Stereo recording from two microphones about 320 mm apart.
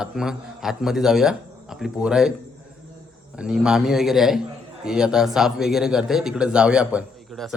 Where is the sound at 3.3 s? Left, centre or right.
Centre.